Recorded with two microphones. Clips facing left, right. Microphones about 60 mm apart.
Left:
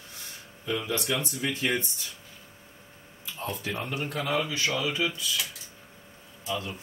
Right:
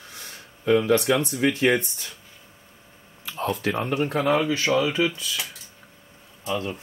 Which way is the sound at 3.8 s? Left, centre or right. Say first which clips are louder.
Right 8 dB; right.